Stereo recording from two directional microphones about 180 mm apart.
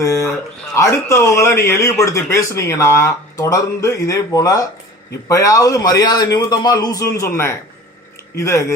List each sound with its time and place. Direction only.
0.0 s a man's voice: 15° left (ahead or behind)